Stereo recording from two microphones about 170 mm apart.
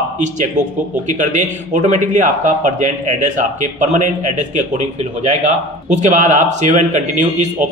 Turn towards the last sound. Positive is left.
turn(degrees=-45)  # may be behind; listen again after turning